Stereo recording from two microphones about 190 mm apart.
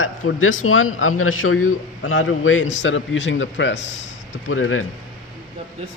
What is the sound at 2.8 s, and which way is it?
Speech, 70° left (ahead or behind).